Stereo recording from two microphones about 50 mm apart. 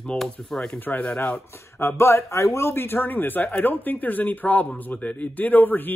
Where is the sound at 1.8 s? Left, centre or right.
Left.